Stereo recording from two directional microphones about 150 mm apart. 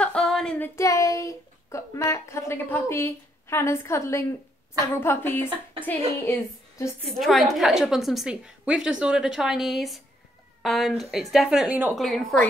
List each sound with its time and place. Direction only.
0.0 s female singing: 5° left (ahead or behind)
0.7 s a woman's voice: 20° left (ahead or behind)
7.1 s a woman's voice: centre (ahead or behind)